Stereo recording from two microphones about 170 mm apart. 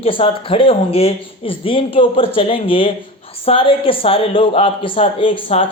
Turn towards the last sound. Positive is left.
turn(degrees=30)  # may be behind; listen again after turning